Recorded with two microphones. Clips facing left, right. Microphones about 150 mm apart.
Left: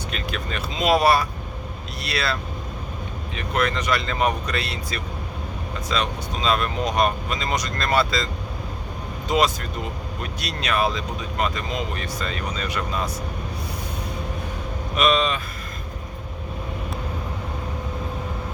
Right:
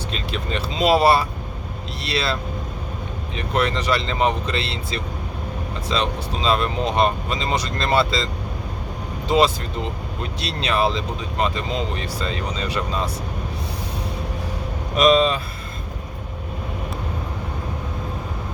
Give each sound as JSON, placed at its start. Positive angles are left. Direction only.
{"t": 0.1, "sound": "speech", "side_deg": -30}
{"t": 14.9, "sound": "speech", "side_deg": -35}